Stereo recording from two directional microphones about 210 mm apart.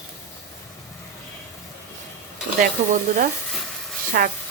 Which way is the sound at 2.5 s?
40° right (ahead or behind).